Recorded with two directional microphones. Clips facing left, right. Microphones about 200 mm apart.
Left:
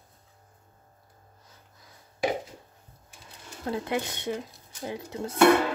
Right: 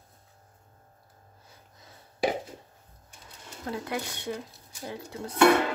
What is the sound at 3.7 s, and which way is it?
Speech, 20° left (ahead or behind).